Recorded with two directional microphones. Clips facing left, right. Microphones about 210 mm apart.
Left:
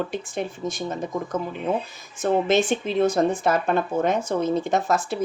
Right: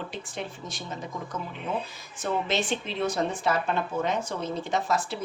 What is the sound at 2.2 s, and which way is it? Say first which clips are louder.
Speech: left 8 dB; 50° left (ahead or behind).